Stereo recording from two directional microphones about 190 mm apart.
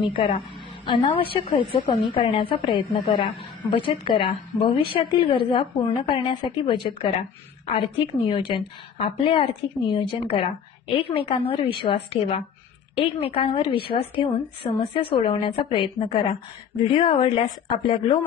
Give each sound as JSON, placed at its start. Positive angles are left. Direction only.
{"t": 0.0, "sound": "a woman's voice", "side_deg": 25}